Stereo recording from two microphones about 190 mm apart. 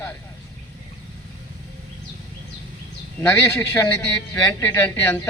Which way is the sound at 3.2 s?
10° left (ahead or behind).